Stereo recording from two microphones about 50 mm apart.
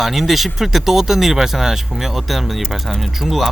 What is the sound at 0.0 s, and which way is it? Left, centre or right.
Speech, centre.